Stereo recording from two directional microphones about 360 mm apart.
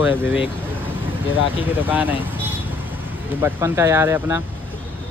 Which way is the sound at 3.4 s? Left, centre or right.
Centre.